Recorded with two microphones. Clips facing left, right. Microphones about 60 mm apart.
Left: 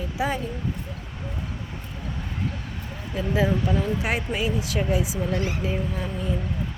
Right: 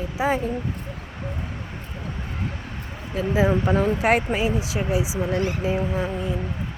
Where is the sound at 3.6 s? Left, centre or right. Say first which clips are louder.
Right 5 dB; right.